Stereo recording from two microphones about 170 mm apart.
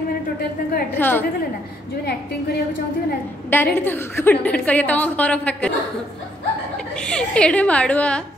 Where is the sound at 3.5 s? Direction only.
10° left (ahead or behind).